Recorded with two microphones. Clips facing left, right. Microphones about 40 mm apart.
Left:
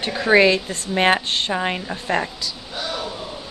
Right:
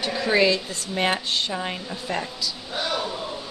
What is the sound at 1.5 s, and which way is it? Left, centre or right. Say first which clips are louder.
Speech: left 6 dB; left.